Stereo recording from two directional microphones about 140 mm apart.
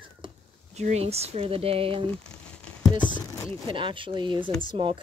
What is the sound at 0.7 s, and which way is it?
Speech, 50° right (ahead or behind).